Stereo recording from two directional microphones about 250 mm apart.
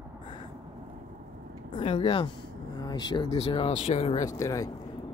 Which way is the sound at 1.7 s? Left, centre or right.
Centre.